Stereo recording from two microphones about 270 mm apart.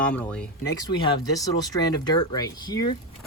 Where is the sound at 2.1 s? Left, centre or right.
Centre.